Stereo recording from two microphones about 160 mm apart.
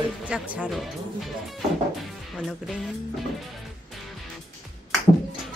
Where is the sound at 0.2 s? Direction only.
5° right (ahead or behind).